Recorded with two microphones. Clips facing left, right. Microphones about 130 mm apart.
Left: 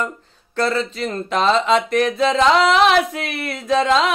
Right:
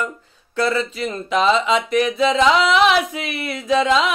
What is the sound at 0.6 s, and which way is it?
Speech, 35° left (ahead or behind).